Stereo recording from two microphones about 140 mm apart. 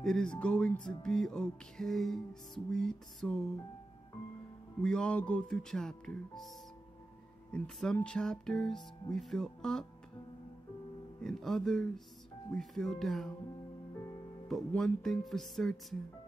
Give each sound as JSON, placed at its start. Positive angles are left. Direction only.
{"t": 0.0, "sound": "music", "side_deg": 5}
{"t": 4.8, "sound": "music", "side_deg": 5}
{"t": 7.5, "sound": "music", "side_deg": 5}
{"t": 11.2, "sound": "music", "side_deg": 5}
{"t": 14.5, "sound": "music", "side_deg": 5}